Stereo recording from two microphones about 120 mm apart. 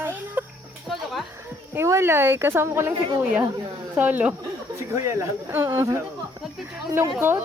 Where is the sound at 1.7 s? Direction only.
20° right (ahead or behind).